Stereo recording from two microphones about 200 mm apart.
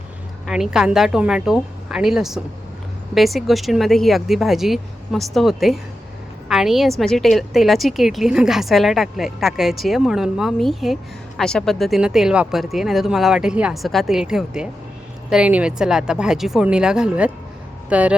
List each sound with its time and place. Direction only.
0.4 s a woman's voice: centre (ahead or behind)